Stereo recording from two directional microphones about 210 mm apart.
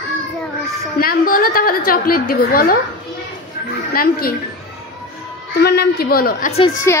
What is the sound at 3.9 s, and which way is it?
Speech, 45° left (ahead or behind).